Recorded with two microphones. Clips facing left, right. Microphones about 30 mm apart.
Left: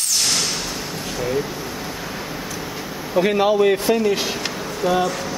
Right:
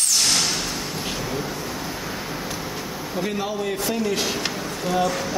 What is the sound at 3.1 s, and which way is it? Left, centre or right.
Speech, left.